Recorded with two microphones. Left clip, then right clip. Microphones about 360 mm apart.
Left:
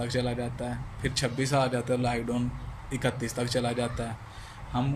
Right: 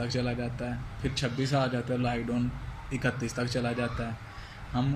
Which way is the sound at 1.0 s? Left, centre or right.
Left.